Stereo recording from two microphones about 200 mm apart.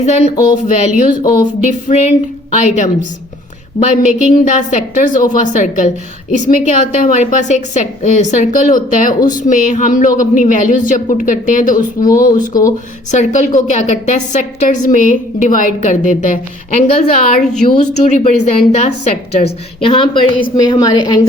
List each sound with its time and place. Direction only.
0.0 s a woman's voice: 35° left (ahead or behind)
1.6 s a woman's voice: 35° left (ahead or behind)
12.0 s speech: 15° left (ahead or behind)
13.1 s a woman's voice: 40° left (ahead or behind); by 21.2 s 20° left (ahead or behind)